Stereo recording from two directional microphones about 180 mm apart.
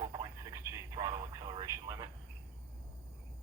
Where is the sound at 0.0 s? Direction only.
15° right (ahead or behind).